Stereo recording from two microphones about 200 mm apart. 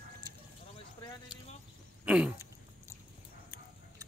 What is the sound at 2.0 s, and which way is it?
Throat clearing, 5° right (ahead or behind).